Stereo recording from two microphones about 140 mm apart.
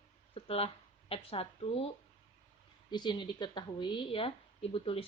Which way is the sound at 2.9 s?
35° left (ahead or behind).